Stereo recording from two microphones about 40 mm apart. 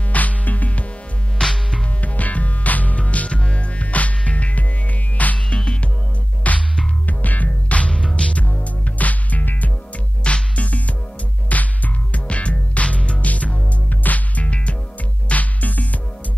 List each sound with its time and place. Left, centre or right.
0.1 s music: left
1.4 s music: centre
2.0 s music: left
5.5 s music: left
6.4 s music: left
8.5 s music: left
10.2 s music: left